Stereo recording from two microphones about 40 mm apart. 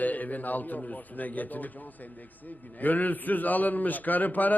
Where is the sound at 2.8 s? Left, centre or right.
Left.